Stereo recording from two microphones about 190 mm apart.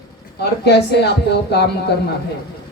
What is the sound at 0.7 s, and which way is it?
Speech, 60° left (ahead or behind).